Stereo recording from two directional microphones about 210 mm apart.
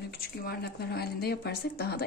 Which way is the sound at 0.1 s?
45° left (ahead or behind).